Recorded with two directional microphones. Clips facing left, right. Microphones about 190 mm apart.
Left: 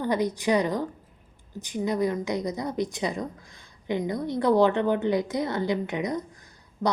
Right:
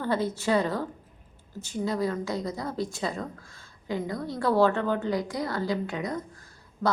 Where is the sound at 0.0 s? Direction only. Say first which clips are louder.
Left 2 dB; 15° left (ahead or behind).